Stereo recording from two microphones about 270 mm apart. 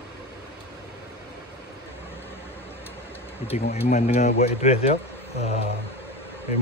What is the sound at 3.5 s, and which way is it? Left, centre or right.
Speech, left.